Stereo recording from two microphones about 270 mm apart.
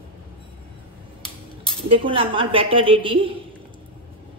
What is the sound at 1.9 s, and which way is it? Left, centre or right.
A woman's voice, centre.